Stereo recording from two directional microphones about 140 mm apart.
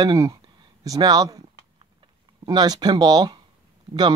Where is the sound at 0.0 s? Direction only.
25° right (ahead or behind).